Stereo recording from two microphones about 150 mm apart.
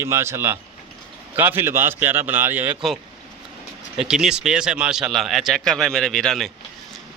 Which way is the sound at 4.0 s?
5° right (ahead or behind).